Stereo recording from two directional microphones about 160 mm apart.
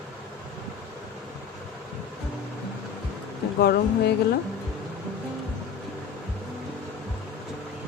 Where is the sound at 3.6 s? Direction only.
80° left.